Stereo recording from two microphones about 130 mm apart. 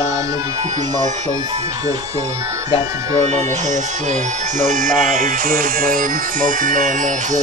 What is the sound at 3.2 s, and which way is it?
Speech, 65° right (ahead or behind).